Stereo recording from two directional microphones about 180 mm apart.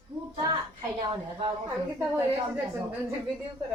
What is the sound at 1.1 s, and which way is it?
Speech, 25° right (ahead or behind).